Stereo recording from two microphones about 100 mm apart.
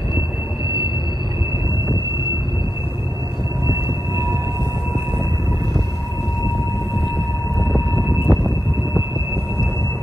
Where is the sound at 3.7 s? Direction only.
30° right (ahead or behind).